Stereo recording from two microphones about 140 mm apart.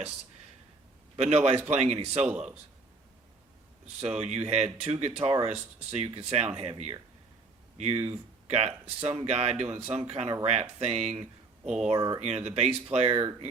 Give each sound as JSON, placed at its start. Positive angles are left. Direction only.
{"t": 1.1, "sound": "a man's voice", "side_deg": -50}
{"t": 2.2, "sound": "speech", "side_deg": -10}
{"t": 4.0, "sound": "speech", "side_deg": -50}
{"t": 11.6, "sound": "speech", "side_deg": -5}
{"t": 11.9, "sound": "speech", "side_deg": -30}
{"t": 12.2, "sound": "speech", "side_deg": -50}